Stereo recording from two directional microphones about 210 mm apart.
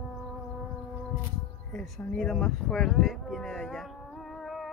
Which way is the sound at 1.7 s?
5° left (ahead or behind).